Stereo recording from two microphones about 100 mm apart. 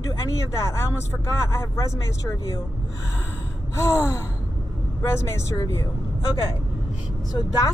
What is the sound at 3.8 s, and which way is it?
Speech, 30° left (ahead or behind).